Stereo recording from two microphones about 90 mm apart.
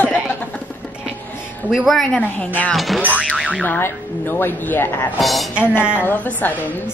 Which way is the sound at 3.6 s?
20° left (ahead or behind).